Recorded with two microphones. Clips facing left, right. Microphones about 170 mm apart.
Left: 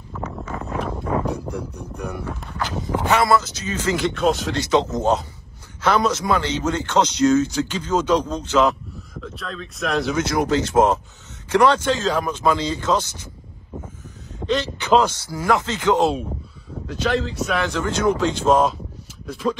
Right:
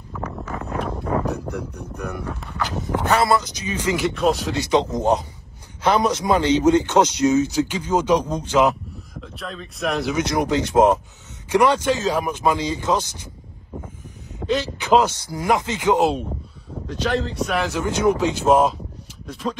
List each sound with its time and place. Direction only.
0.1 s wind: 5° left (ahead or behind)
0.5 s a sound: 5° right (ahead or behind)
1.5 s speech: 10° left (ahead or behind)
3.1 s speech: 30° right (ahead or behind)
3.3 s speech: 15° right (ahead or behind)
4.1 s speech: centre (ahead or behind)
4.6 s speech: 15° right (ahead or behind)
10.1 s speech: 20° right (ahead or behind)
14.4 s speech: centre (ahead or behind)
15.3 s speech: 15° right (ahead or behind)
16.8 s speech: 5° left (ahead or behind)
19.2 s speech: centre (ahead or behind)